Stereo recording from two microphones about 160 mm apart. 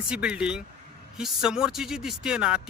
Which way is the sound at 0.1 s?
5° right (ahead or behind).